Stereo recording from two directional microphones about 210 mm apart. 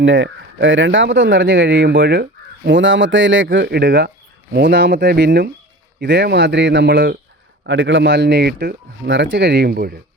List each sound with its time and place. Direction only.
0.0 s speech: 65° right (ahead or behind)
1.9 s speech: 50° right (ahead or behind)
2.6 s speech: 60° right (ahead or behind); by 7.2 s 45° right (ahead or behind)
7.7 s speech: 65° right (ahead or behind); by 10.0 s 45° right (ahead or behind)